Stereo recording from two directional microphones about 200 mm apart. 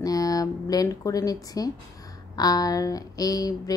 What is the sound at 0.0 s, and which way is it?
Speech, 15° left (ahead or behind).